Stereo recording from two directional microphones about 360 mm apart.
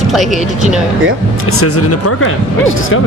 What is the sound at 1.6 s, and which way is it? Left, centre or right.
Speech, left.